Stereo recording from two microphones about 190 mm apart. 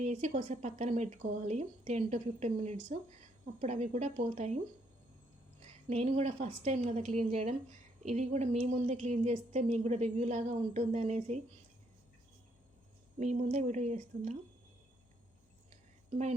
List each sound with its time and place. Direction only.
0.0 s a woman's voice: 35° right (ahead or behind)
5.6 s a woman's voice: 35° right (ahead or behind)
13.1 s a woman's voice: 35° right (ahead or behind)